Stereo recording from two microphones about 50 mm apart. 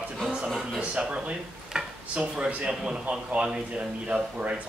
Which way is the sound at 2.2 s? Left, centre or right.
Right.